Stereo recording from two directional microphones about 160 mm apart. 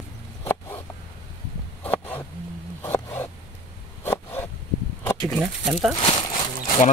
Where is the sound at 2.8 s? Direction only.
15° left (ahead or behind).